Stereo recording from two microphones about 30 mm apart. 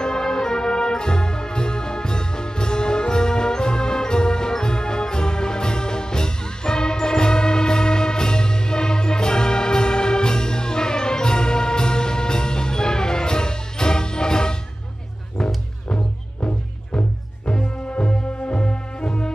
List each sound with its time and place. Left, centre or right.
0.0 s music: left
16.3 s music: left
17.5 s music: left